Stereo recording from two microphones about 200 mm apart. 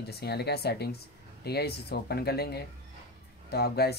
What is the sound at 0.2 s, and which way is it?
Speech, 55° left (ahead or behind).